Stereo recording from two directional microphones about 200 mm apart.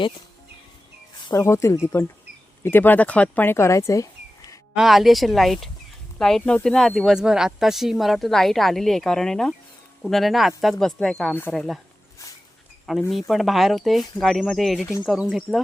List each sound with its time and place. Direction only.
1.3 s speech: 15° left (ahead or behind)
4.7 s speech: centre (ahead or behind)
12.8 s speech: centre (ahead or behind)